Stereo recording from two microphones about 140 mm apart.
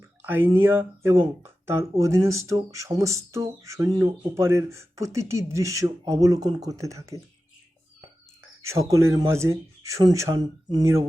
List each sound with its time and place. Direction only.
0.2 s speech: 15° right (ahead or behind)
8.6 s speech: 20° right (ahead or behind)